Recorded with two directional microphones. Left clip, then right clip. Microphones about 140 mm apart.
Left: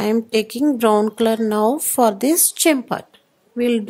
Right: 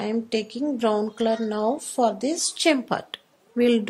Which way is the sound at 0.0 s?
55° left (ahead or behind).